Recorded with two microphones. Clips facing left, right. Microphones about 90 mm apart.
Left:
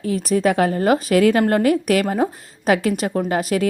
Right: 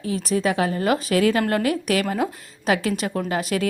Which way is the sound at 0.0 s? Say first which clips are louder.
Left 4 dB; 40° left (ahead or behind).